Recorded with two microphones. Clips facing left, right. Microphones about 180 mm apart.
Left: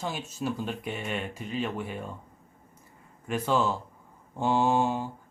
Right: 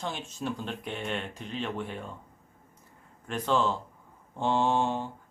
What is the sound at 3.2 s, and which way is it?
Speech, 5° left (ahead or behind).